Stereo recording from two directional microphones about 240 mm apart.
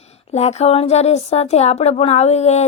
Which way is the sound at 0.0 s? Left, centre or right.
Left.